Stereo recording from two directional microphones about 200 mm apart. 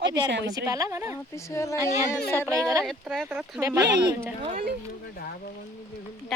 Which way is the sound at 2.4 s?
15° right (ahead or behind).